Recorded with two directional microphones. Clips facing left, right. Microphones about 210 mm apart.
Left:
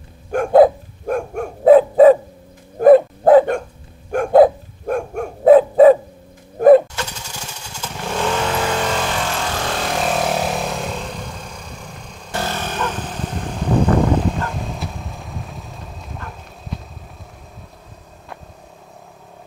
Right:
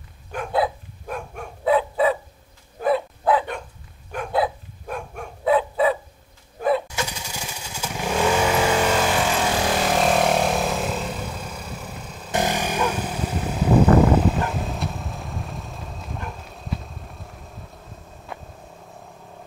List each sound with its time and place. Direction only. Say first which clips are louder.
0.3 s dog: left 12 dB; 45° left (ahead or behind)
6.6 s a sound: left 13 dB; 50° left (ahead or behind)
7.0 s motorcycle: even; 10° right (ahead or behind)
12.3 s vehicle: right 2 dB; 15° right (ahead or behind); by 16.2 s centre (ahead or behind)